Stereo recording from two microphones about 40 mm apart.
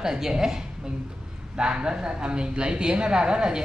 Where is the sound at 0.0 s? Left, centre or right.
Centre.